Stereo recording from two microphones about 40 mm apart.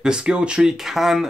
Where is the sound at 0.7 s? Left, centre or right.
Centre.